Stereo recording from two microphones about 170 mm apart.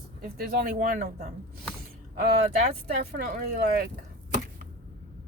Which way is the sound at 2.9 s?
70° right (ahead or behind).